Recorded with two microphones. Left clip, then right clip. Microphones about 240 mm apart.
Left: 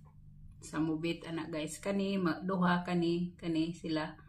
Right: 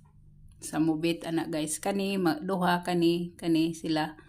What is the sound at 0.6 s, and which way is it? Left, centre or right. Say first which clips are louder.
Speech: right 7 dB; right.